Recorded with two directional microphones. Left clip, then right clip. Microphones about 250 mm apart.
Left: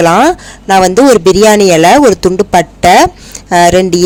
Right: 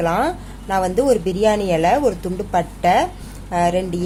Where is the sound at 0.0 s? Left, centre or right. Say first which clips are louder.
Left 13 dB; left.